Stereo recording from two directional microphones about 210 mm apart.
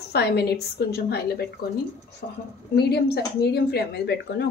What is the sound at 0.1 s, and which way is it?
Speech, 50° left (ahead or behind).